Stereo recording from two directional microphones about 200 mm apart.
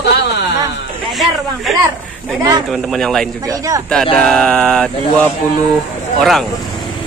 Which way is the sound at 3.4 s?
15° right (ahead or behind).